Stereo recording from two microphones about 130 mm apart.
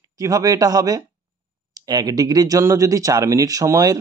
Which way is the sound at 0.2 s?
25° right (ahead or behind).